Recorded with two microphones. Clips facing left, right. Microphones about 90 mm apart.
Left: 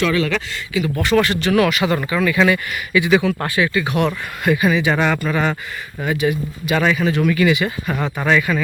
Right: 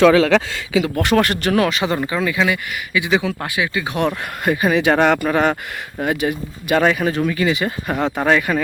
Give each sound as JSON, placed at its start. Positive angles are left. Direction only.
{"t": 0.3, "sound": "speech", "side_deg": -90}
{"t": 1.1, "sound": "speech", "side_deg": -50}
{"t": 1.5, "sound": "speech", "side_deg": -30}
{"t": 4.4, "sound": "speech", "side_deg": -40}
{"t": 4.8, "sound": "speech", "side_deg": -55}
{"t": 7.2, "sound": "speech", "side_deg": -30}
{"t": 7.9, "sound": "speech", "side_deg": -25}
{"t": 8.2, "sound": "speech", "side_deg": -45}